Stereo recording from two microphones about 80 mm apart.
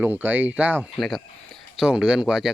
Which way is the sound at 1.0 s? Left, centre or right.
Centre.